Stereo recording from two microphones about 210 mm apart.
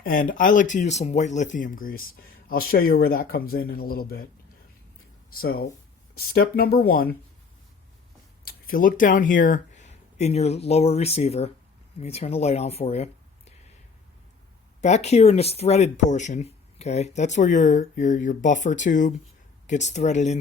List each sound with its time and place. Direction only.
0.0 s speech: 45° left (ahead or behind)
5.4 s speech: 45° left (ahead or behind)
8.4 s speech: 45° left (ahead or behind)
14.8 s speech: 35° left (ahead or behind)